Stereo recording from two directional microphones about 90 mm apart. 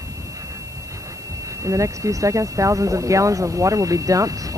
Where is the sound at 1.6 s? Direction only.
35° right (ahead or behind).